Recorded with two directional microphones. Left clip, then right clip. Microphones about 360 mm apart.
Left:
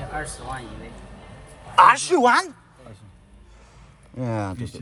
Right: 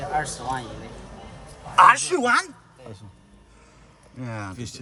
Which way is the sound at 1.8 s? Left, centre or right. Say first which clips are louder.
Left 1 dB; centre.